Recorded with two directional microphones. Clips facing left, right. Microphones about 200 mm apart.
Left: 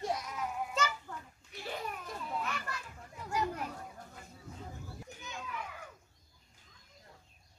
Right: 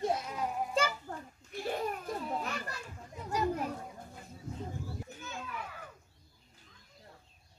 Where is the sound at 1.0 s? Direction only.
45° right (ahead or behind); by 3.6 s 30° right (ahead or behind).